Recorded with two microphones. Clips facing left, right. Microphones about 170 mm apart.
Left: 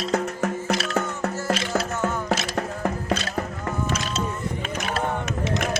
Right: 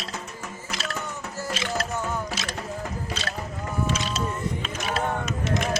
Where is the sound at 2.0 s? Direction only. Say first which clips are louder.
Left 5 dB; 65° left (ahead or behind).